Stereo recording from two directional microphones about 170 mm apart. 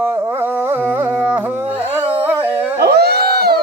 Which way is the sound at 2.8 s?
70° right (ahead or behind).